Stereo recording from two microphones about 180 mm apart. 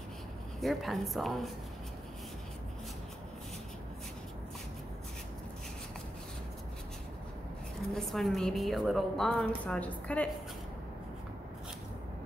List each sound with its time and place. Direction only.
0.6 s a woman's voice: centre (ahead or behind)
7.9 s a woman's voice: centre (ahead or behind)